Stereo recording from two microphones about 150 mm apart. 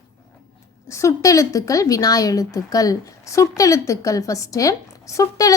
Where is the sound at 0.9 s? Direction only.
20° left (ahead or behind).